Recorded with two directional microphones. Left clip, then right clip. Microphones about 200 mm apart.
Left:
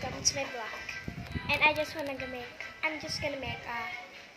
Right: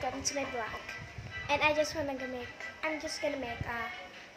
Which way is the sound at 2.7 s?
15° right (ahead or behind).